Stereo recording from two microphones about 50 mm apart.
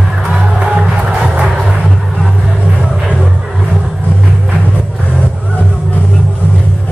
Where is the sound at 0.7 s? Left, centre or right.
Centre.